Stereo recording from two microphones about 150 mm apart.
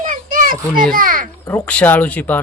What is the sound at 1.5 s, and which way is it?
Speech, 10° left (ahead or behind).